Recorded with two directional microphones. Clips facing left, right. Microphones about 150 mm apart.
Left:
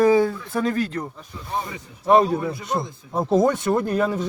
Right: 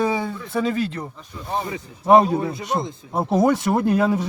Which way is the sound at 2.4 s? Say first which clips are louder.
Right 1 dB; 25° right (ahead or behind).